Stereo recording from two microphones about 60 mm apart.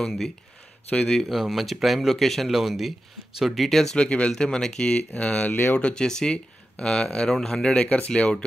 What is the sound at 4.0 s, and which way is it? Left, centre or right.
Speech, centre.